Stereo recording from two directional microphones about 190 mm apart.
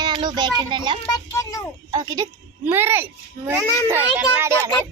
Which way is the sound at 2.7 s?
10° right (ahead or behind).